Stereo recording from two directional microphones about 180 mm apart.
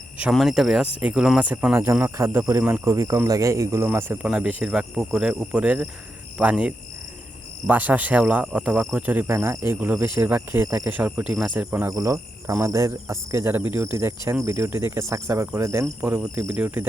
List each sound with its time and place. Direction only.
0.2 s speech: 5° right (ahead or behind)